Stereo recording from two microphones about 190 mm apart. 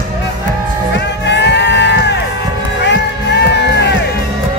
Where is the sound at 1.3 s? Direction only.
65° left (ahead or behind).